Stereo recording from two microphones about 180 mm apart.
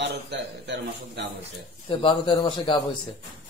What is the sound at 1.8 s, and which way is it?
Speech, 30° left (ahead or behind).